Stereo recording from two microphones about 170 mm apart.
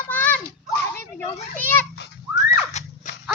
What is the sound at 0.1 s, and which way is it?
Children playing, 10° left (ahead or behind).